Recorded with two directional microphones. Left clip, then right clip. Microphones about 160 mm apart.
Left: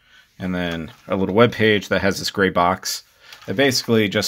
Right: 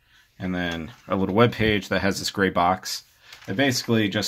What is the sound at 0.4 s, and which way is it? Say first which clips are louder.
Speech: left 3 dB; 25° left (ahead or behind).